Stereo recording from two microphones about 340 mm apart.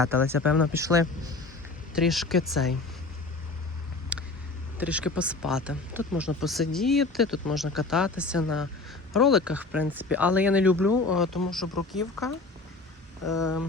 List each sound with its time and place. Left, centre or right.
0.0 s speech: centre
4.1 s vehicle: centre
4.8 s speech: centre
10.8 s speech: left
11.5 s speech: centre
13.2 s speech: left